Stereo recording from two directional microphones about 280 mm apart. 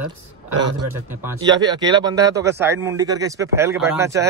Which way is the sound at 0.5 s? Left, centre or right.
Right.